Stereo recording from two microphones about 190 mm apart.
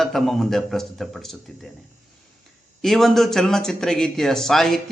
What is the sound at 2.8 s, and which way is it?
Speech, centre (ahead or behind).